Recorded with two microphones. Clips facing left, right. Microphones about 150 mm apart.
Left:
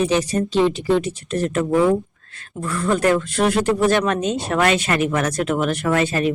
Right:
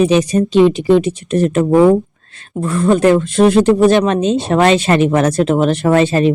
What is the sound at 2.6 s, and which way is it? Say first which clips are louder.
Speech: right 7 dB; 25° right (ahead or behind).